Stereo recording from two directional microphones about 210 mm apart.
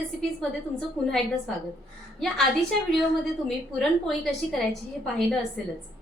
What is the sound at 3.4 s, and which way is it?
A woman's voice, centre (ahead or behind).